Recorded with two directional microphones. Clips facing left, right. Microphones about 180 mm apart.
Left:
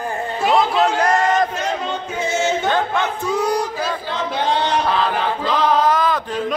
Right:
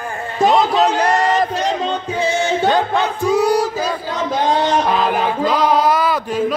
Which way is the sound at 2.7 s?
15° right (ahead or behind).